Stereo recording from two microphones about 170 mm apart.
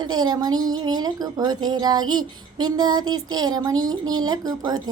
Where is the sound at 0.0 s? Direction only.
25° right (ahead or behind).